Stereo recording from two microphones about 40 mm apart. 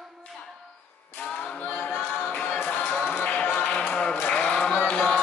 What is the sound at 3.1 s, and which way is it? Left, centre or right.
Music, left.